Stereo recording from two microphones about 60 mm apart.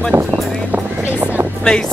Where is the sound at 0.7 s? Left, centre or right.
Right.